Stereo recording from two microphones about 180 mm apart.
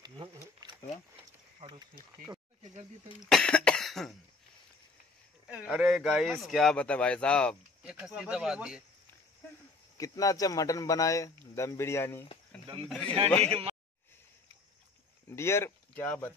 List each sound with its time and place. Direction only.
0.0 s a sound: 25° right (ahead or behind)
3.3 s speech: 5° left (ahead or behind)
5.5 s speech: 5° right (ahead or behind)
9.9 s speech: 20° left (ahead or behind)
12.8 s speech: 5° left (ahead or behind)
13.5 s a man's voice: 30° right (ahead or behind)
15.2 s speech: 15° left (ahead or behind)